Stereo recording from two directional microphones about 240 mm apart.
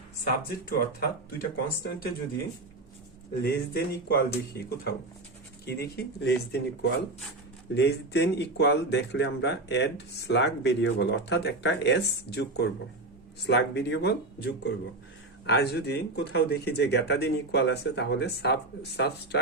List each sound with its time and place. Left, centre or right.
0.7 s speech: left
3.4 s speech: left